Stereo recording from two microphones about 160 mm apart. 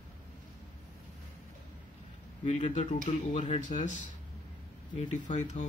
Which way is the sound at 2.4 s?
45° left (ahead or behind).